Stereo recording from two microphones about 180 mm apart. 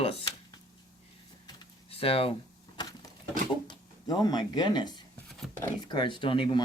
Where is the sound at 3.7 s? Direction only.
20° left (ahead or behind).